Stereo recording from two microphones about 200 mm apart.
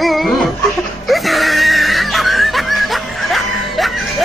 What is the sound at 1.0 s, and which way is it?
Screaming, centre (ahead or behind).